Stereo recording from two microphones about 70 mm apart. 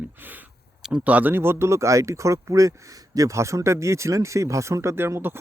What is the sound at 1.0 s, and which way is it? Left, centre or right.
Speech, right.